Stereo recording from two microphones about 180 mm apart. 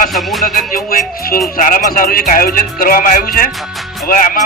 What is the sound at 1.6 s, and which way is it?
Speech, 50° left (ahead or behind).